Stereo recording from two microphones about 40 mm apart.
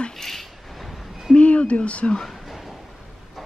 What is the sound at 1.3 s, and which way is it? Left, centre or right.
Speech, left.